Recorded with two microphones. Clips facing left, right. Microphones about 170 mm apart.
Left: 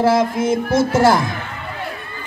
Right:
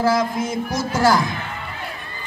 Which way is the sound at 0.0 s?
25° left (ahead or behind).